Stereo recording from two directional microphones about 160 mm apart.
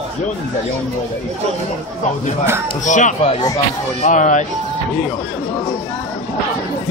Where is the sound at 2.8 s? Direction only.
50° left (ahead or behind).